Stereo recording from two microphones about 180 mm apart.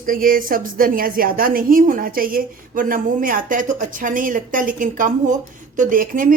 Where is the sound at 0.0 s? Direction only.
50° right (ahead or behind).